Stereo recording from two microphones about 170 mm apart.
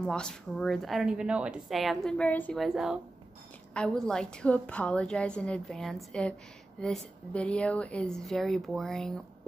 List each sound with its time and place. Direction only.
0.0 s a woman's voice: 5° left (ahead or behind)